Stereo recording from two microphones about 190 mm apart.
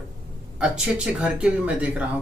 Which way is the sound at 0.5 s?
5° right (ahead or behind).